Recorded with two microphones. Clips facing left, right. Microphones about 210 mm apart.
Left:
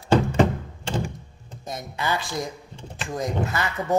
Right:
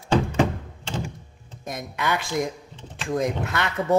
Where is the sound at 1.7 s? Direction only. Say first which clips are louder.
Right 1 dB; 70° right (ahead or behind).